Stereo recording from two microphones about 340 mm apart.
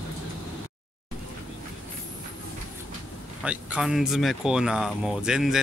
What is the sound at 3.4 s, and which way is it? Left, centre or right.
Speech, centre.